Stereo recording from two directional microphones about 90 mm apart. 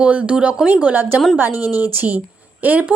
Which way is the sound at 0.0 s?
15° right (ahead or behind).